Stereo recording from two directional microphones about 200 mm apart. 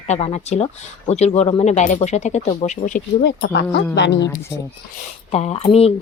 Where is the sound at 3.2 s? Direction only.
60° left (ahead or behind).